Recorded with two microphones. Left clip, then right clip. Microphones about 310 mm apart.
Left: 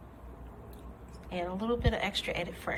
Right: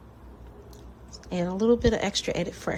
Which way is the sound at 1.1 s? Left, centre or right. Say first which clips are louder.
Right 5 dB; right.